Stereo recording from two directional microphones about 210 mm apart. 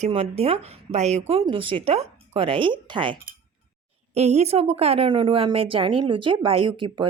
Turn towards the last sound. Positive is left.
turn(degrees=-25)  # may be behind; listen again after turning